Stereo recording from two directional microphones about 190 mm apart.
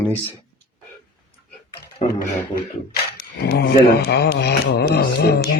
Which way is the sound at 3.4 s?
55° left (ahead or behind).